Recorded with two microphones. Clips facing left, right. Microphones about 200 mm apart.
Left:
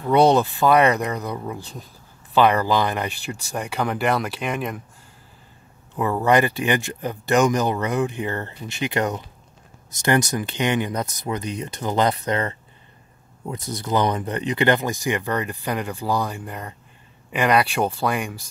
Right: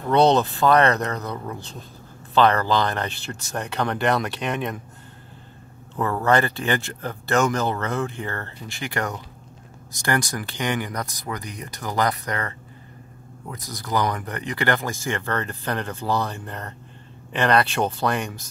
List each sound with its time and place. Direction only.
0.1 s speech: 10° left (ahead or behind)
5.9 s speech: 15° left (ahead or behind)